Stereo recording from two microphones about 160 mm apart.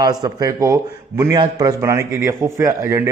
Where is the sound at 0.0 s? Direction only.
25° right (ahead or behind).